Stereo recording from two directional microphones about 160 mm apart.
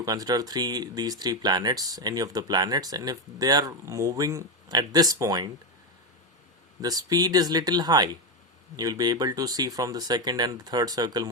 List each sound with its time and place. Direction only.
0.0 s speech: 25° right (ahead or behind)
6.8 s speech: 25° right (ahead or behind)